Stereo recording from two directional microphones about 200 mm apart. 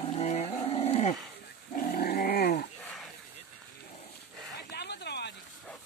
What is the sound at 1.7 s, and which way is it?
Dog, 45° left (ahead or behind).